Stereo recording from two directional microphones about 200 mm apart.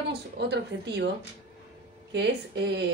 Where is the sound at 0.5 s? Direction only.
60° right (ahead or behind).